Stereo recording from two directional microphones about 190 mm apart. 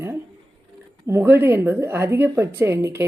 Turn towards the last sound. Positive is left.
turn(degrees=-15)  # may be behind; listen again after turning